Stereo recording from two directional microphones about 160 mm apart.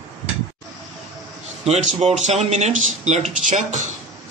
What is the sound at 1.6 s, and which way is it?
A man's voice, 45° right (ahead or behind).